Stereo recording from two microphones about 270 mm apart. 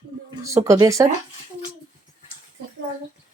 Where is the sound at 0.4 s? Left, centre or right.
Centre.